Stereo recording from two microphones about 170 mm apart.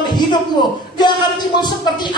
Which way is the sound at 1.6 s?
25° left (ahead or behind).